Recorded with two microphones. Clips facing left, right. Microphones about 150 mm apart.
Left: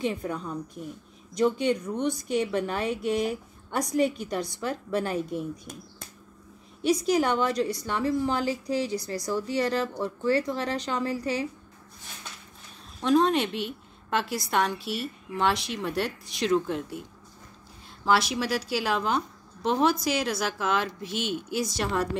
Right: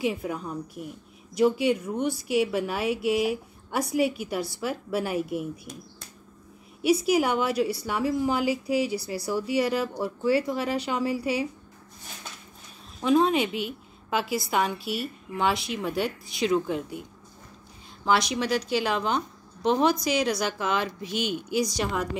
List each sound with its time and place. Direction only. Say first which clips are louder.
0.0 s a woman's voice: right 1 dB; 5° right (ahead or behind)
6.8 s a woman's voice: right 1 dB; 10° right (ahead or behind)
13.0 s a woman's voice: right 1 dB; centre (ahead or behind)